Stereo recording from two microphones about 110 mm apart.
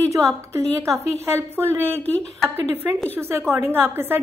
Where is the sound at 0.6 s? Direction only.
25° right (ahead or behind).